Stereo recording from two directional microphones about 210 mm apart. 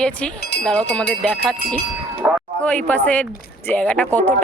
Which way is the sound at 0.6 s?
5° left (ahead or behind).